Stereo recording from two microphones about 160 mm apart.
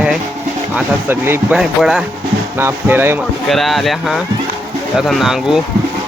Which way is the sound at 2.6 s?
15° right (ahead or behind).